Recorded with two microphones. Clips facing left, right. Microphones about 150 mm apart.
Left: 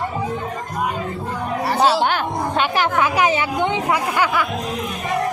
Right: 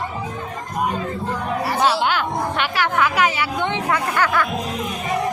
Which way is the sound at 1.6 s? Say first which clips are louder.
Left 3 dB; 35° left (ahead or behind).